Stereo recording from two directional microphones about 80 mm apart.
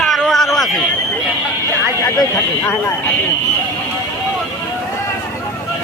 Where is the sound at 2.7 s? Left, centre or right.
Left.